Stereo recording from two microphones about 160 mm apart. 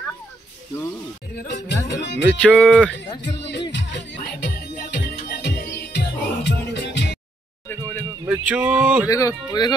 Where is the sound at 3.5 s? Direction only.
90° left.